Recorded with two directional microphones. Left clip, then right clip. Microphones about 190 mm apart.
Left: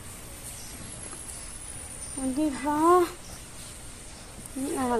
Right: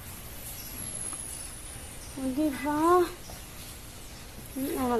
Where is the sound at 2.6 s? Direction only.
30° left (ahead or behind).